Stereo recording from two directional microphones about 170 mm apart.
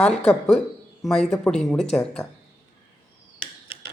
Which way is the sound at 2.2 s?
20° left (ahead or behind).